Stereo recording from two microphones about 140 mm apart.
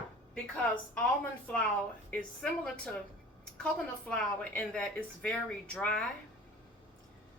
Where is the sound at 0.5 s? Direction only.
10° left (ahead or behind).